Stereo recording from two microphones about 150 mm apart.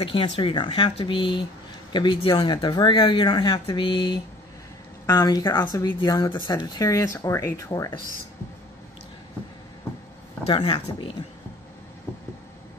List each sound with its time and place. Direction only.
0.0 s speech: 35° left (ahead or behind)
10.4 s speech: 35° left (ahead or behind)